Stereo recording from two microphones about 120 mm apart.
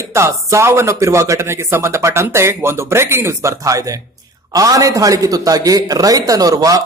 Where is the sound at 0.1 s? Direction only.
25° right (ahead or behind).